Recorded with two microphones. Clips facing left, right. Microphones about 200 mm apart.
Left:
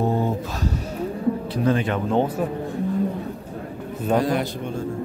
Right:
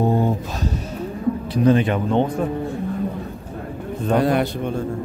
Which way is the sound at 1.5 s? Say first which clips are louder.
Right 8 dB; 20° right (ahead or behind).